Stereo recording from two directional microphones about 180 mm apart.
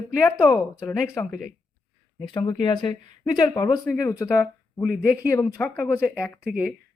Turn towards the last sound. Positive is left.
turn(degrees=-5)  # may be behind; listen again after turning